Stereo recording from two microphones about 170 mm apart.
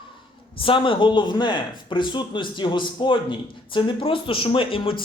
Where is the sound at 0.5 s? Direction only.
30° left (ahead or behind).